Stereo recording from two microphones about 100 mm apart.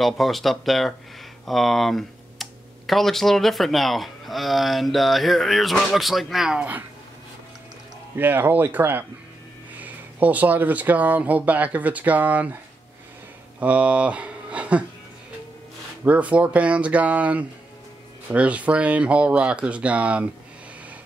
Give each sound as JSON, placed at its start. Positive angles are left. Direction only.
{"t": 0.0, "sound": "speech", "side_deg": 0}
{"t": 8.2, "sound": "speech", "side_deg": -20}
{"t": 13.6, "sound": "speech", "side_deg": -15}
{"t": 16.0, "sound": "speech", "side_deg": -15}